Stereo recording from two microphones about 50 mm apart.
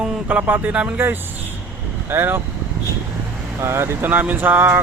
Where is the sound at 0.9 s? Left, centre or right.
Right.